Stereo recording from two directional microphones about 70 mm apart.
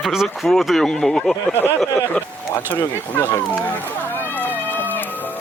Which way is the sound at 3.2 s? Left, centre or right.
Left.